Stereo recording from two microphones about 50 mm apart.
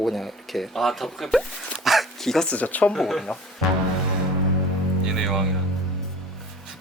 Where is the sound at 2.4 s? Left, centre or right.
Left.